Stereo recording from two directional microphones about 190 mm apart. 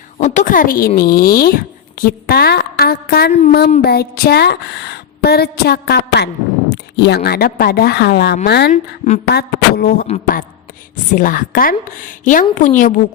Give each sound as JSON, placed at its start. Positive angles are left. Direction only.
{"t": 0.2, "sound": "a woman's voice", "side_deg": 40}
{"t": 8.7, "sound": "a woman's voice", "side_deg": 35}
{"t": 9.3, "sound": "a woman's voice", "side_deg": 55}
{"t": 11.1, "sound": "a woman's voice", "side_deg": 45}